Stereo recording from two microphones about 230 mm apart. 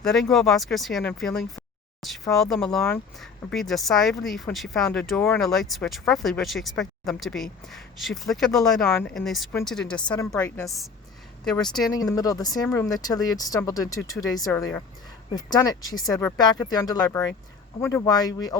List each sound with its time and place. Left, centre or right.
0.0 s speech: centre
11.9 s speech: centre